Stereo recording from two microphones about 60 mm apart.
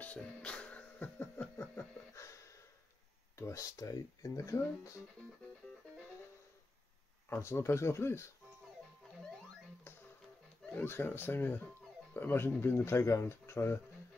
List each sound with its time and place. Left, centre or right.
0.0 s music: left
2.1 s a sound: left
3.3 s speech: left
7.2 s speech: left
10.7 s speech: left
12.7 s speech: left